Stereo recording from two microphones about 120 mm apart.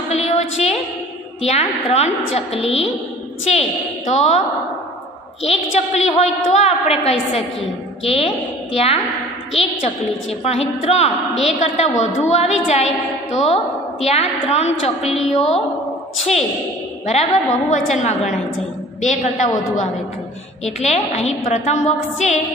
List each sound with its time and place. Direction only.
0.1 s a sound: 65° left (ahead or behind)
1.4 s a woman's voice: 65° left (ahead or behind)
3.4 s a woman's voice: 70° left (ahead or behind)
5.4 s a woman's voice: 65° left (ahead or behind)
10.4 s a woman's voice: 60° left (ahead or behind)
15.0 s a woman's voice: 5° right (ahead or behind)
15.3 s a woman's voice: 65° left (ahead or behind); by 19.9 s 80° left
20.6 s a woman's voice: 65° left (ahead or behind)